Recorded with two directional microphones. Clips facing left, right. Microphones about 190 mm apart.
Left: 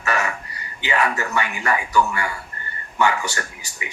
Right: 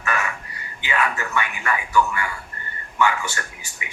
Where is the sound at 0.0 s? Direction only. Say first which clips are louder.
Left 3 dB; 40° left (ahead or behind).